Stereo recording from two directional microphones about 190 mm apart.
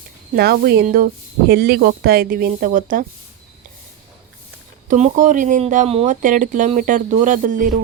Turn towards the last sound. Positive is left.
turn(degrees=-45)  # may be behind; listen again after turning